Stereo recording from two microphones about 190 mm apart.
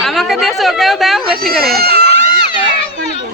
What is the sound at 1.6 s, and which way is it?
Speech, 55° right (ahead or behind).